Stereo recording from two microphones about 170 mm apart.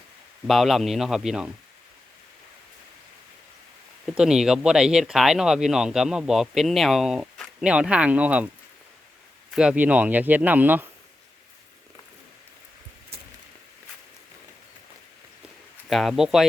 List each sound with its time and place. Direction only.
0.4 s speech: centre (ahead or behind)
4.0 s speech: 5° right (ahead or behind)
9.5 s speech: 5° right (ahead or behind)
15.9 s speech: centre (ahead or behind)